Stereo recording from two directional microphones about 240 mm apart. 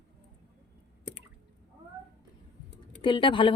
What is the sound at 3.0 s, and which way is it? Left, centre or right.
Speech, centre.